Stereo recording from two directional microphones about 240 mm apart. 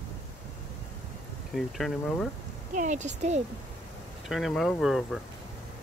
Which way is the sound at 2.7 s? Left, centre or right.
Right.